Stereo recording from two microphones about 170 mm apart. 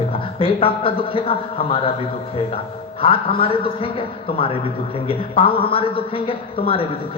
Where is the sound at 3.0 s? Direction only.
35° left (ahead or behind).